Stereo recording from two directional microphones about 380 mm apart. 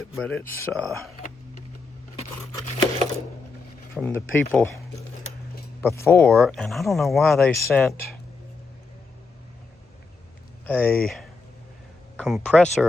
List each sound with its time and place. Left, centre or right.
0.2 s speech: centre
2.1 s scissors: centre
3.9 s speech: centre
5.8 s speech: centre
10.7 s speech: centre